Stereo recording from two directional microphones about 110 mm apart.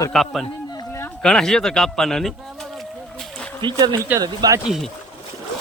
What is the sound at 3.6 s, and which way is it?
Speech, 35° right (ahead or behind).